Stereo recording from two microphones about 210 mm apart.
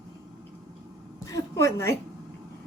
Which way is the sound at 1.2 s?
15° left (ahead or behind).